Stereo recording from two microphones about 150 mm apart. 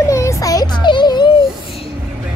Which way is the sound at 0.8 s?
30° left (ahead or behind).